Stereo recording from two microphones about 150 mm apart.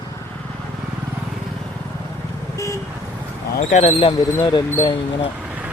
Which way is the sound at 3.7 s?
45° left (ahead or behind).